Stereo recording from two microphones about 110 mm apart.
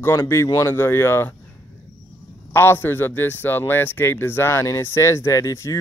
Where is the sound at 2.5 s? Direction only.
20° left (ahead or behind).